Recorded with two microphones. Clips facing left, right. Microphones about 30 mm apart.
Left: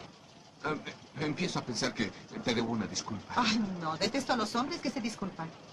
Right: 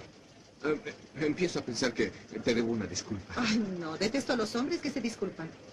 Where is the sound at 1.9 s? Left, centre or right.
Centre.